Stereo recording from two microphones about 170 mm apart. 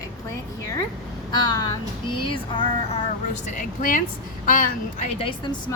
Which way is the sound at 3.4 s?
50° left (ahead or behind).